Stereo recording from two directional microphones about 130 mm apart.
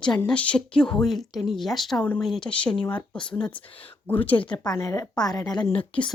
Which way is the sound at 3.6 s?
40° left (ahead or behind).